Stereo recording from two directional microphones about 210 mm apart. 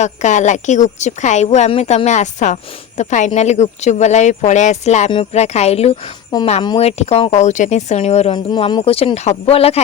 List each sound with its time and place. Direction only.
0.0 s speech: 35° left (ahead or behind)